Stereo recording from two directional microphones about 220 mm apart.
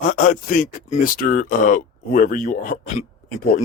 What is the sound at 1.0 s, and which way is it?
Speech, 40° left (ahead or behind).